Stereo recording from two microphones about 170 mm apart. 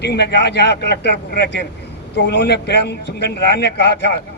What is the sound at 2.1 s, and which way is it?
A man's voice, 90° left.